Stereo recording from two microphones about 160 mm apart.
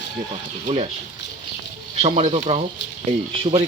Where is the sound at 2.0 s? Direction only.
40° right (ahead or behind).